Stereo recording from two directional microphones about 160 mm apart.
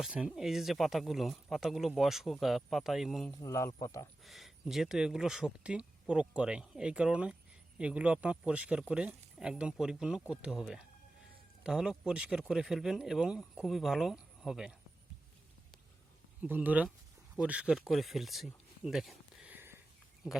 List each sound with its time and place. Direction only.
0.0 s speech: 5° right (ahead or behind)
3.4 s speech: 20° left (ahead or behind)
4.2 s speech: centre (ahead or behind)
16.4 s speech: 10° right (ahead or behind)